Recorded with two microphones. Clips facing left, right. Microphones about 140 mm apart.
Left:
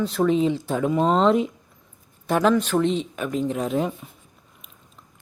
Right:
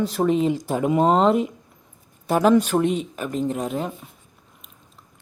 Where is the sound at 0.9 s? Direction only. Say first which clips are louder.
Right 3 dB; 45° right (ahead or behind).